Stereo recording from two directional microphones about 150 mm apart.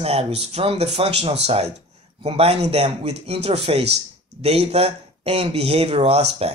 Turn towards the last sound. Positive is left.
turn(degrees=-40)  # may be behind; listen again after turning